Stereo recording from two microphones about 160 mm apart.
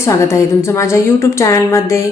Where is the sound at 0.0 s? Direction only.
20° left (ahead or behind).